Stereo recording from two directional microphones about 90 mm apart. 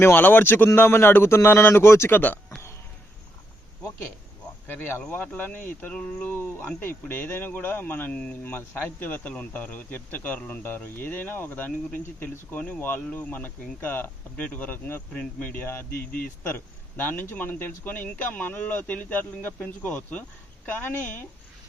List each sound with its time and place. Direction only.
0.0 s speech: 20° left (ahead or behind)
4.6 s speech: 20° left (ahead or behind)
6.3 s speech: 25° left (ahead or behind)
17.0 s speech: 20° left (ahead or behind)